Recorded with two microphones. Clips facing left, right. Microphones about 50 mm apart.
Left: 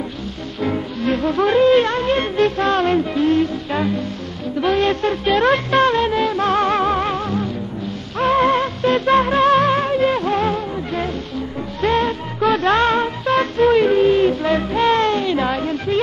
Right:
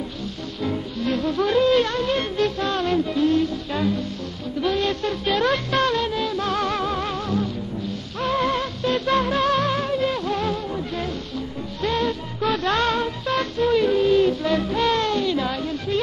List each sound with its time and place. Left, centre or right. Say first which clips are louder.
0.6 s music: left 5 dB; left